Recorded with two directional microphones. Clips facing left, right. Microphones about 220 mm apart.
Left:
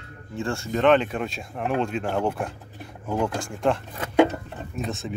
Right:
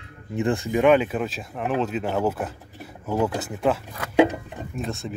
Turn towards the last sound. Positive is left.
turn(degrees=0)  # may be behind; listen again after turning